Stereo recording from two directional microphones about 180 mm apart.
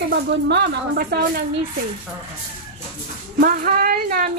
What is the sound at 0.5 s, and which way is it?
Speech, 65° right (ahead or behind).